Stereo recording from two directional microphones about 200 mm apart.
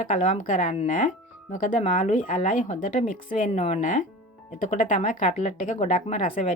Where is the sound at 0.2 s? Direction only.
35° left (ahead or behind).